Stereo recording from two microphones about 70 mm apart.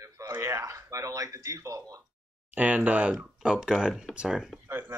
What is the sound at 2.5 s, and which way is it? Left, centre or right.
Speech, right.